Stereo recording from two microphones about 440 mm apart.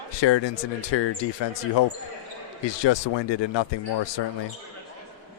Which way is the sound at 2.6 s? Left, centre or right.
Left.